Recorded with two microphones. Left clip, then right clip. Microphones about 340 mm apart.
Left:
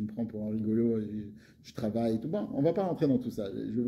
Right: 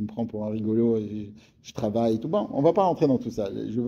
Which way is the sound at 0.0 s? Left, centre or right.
Right.